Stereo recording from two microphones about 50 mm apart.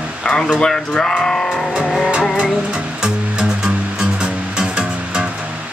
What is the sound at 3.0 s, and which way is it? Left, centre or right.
Music, centre.